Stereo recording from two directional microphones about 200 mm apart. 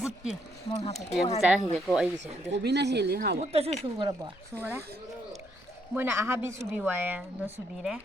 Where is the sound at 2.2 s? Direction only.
60° right (ahead or behind).